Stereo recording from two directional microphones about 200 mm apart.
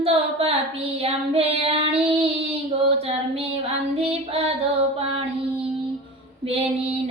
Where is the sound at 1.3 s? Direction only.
30° right (ahead or behind).